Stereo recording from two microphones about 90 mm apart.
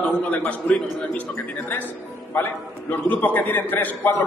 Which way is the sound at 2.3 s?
20° left (ahead or behind).